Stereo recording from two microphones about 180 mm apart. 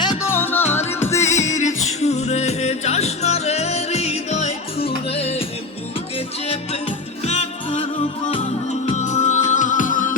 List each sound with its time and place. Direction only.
0.0 s music: 25° left (ahead or behind)
0.3 s music: 10° left (ahead or behind)
1.2 s music: 40° left (ahead or behind)
7.3 s music: 35° left (ahead or behind)
8.9 s music: 40° left (ahead or behind)